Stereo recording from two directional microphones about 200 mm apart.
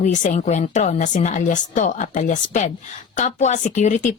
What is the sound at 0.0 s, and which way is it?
A woman's voice, 40° left (ahead or behind).